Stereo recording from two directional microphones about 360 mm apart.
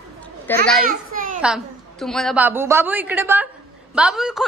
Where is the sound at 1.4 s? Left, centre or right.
Centre.